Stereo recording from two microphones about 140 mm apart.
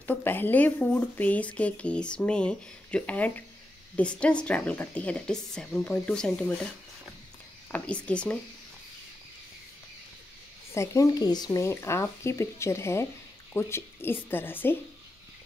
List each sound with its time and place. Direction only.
0.0 s speech: 15° left (ahead or behind)
7.7 s speech: 10° left (ahead or behind)
10.7 s speech: 20° left (ahead or behind)